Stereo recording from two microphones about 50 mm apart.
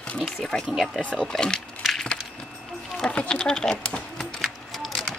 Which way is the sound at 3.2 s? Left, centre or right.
Centre.